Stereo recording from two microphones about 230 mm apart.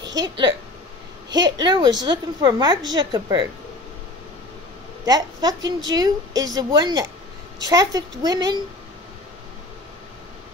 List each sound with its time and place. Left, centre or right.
0.2 s a woman's voice: centre
5.0 s a woman's voice: centre